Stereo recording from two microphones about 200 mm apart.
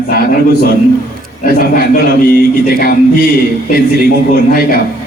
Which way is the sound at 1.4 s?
50° left (ahead or behind).